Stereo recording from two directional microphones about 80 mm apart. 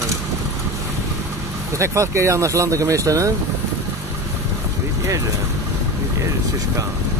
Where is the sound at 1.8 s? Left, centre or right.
Right.